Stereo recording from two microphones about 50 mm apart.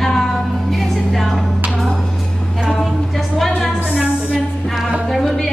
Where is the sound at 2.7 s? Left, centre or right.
Centre.